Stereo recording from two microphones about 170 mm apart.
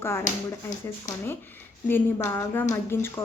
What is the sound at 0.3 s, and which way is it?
Speech, 45° left (ahead or behind).